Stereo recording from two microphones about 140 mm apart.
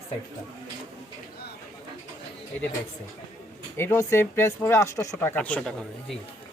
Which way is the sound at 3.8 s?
15° left (ahead or behind).